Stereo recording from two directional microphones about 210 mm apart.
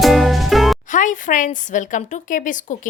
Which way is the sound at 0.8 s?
35° left (ahead or behind).